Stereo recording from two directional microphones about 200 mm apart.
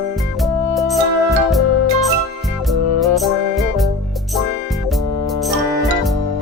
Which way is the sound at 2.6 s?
Centre (ahead or behind).